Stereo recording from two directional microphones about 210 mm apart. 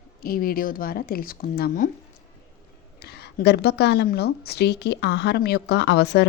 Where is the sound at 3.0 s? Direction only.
50° left (ahead or behind).